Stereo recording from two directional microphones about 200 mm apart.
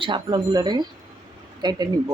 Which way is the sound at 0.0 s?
25° right (ahead or behind).